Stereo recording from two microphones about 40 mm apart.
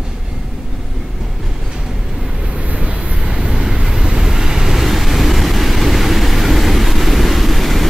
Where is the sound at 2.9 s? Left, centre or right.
Right; by 7.9 s centre.